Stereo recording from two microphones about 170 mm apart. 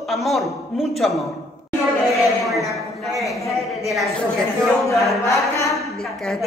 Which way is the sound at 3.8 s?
Centre (ahead or behind).